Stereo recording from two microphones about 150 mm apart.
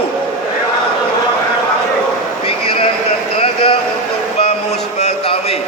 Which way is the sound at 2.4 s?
35° left (ahead or behind).